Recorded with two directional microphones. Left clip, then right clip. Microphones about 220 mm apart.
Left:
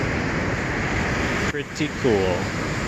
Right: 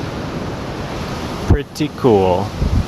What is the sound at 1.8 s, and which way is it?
Speech, 30° right (ahead or behind).